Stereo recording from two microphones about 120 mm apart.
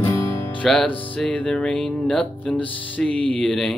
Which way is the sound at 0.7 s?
10° left (ahead or behind).